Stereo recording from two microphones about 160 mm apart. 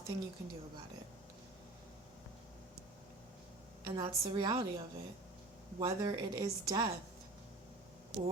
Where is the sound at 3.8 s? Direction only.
30° right (ahead or behind).